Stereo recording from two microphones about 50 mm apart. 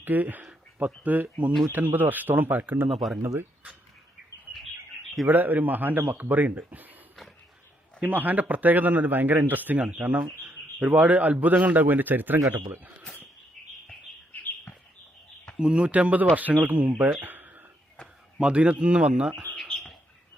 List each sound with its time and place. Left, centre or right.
0.0 s a man's voice: right
2.9 s speech: centre
5.2 s a man's voice: right
8.0 s a man's voice: right
13.6 s bird: centre
15.5 s a man's voice: right
17.2 s a sound: right
18.3 s speech: right
19.5 s bird: left